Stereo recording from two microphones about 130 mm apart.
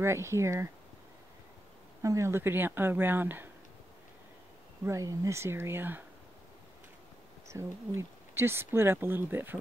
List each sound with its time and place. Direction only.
0.0 s speech: 20° right (ahead or behind)
2.0 s speech: 25° right (ahead or behind)
4.8 s speech: 25° right (ahead or behind)
7.4 s speech: 20° right (ahead or behind)